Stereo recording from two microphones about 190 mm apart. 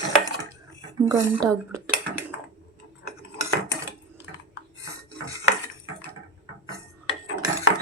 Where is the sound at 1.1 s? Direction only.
15° right (ahead or behind).